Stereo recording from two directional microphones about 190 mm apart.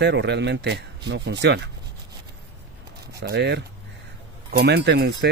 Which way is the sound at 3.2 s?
60° right (ahead or behind).